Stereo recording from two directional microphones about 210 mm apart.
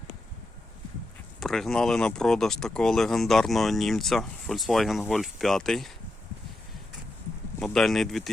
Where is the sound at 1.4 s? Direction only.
Centre (ahead or behind).